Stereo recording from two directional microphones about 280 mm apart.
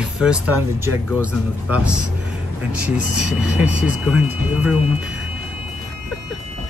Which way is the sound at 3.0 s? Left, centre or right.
Left.